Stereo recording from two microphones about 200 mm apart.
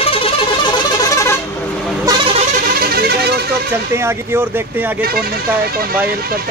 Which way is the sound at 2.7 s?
50° right (ahead or behind).